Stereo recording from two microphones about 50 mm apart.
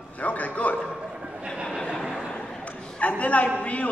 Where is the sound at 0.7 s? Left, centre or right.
Centre.